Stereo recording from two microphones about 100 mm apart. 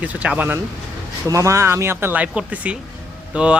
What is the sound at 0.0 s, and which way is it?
Speech, 15° right (ahead or behind).